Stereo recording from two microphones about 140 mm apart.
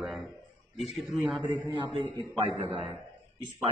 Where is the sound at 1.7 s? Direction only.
35° right (ahead or behind).